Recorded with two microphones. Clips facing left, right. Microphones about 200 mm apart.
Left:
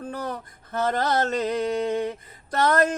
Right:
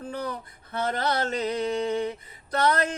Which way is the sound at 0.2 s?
45° left (ahead or behind).